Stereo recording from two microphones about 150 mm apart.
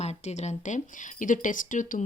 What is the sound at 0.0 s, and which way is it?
A woman's voice, 45° left (ahead or behind).